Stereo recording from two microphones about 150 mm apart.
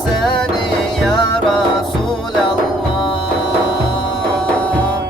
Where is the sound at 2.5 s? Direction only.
35° left (ahead or behind).